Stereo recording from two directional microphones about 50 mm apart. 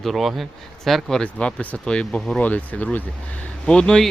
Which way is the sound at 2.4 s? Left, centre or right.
Left.